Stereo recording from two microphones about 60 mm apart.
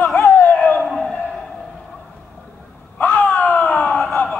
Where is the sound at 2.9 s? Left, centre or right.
Left.